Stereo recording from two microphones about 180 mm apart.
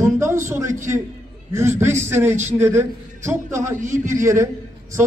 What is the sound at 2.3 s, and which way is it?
Speech, 40° right (ahead or behind).